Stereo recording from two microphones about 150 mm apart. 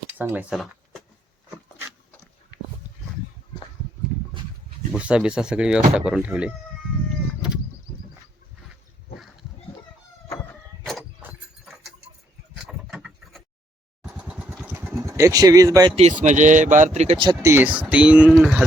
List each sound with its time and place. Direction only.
0.2 s speech: 10° right (ahead or behind)
0.5 s a sound: centre (ahead or behind)
4.9 s speech: 10° right (ahead or behind)
10.3 s a sound: centre (ahead or behind)
12.5 s vehicle: 5° right (ahead or behind); by 15.9 s 20° right (ahead or behind)
16.2 s speech: 55° right (ahead or behind)
17.4 s speech: 15° right (ahead or behind)